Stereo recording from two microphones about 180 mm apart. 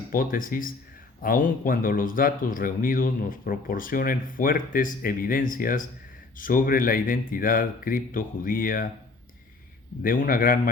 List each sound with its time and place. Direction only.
0.1 s speech: 50° left (ahead or behind)
10.0 s speech: 50° left (ahead or behind)